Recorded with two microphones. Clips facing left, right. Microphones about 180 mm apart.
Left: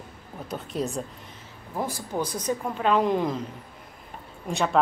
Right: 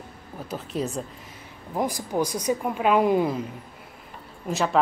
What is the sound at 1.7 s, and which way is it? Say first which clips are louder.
Speech: right 4 dB; 15° right (ahead or behind).